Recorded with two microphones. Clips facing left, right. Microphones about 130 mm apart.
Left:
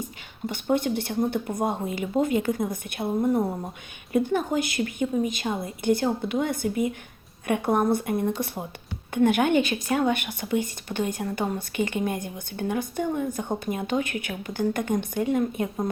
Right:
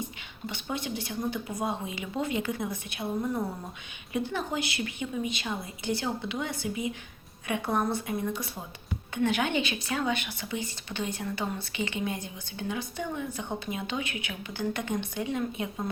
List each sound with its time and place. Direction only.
0.0 s a sound: 50° left (ahead or behind)
1.3 s speech: 55° left (ahead or behind)
4.1 s speech: 50° left (ahead or behind)